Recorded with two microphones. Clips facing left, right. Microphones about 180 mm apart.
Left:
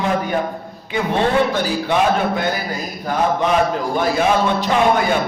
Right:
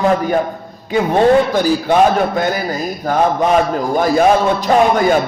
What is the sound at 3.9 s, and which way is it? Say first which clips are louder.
Speech: right 6 dB; 45° right (ahead or behind).